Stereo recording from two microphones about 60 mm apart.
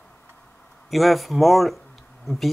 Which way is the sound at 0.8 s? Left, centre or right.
Centre.